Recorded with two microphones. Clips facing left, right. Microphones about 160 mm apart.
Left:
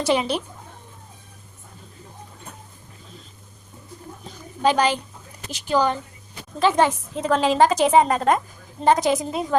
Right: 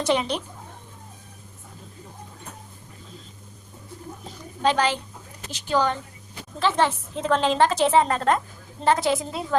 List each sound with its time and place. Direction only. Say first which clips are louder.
0.0 s a woman's voice: left 2 dB; 5° left (ahead or behind)
4.6 s a woman's voice: left 2 dB; 15° left (ahead or behind)